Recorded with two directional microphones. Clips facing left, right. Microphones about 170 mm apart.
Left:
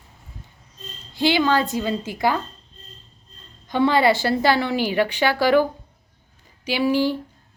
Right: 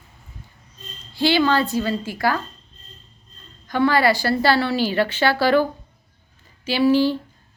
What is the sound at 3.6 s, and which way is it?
A woman's voice, 20° left (ahead or behind).